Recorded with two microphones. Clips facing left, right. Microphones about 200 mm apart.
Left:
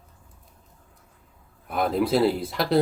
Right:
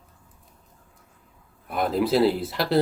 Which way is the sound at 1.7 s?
Centre (ahead or behind).